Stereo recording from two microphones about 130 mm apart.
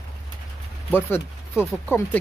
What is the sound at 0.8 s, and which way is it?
Speech, 15° left (ahead or behind).